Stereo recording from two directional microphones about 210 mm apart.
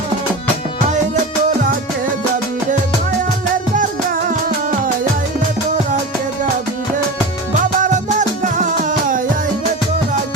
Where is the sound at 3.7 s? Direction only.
40° right (ahead or behind).